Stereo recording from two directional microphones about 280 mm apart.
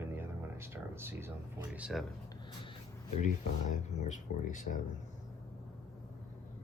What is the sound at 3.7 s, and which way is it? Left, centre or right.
Speech, left.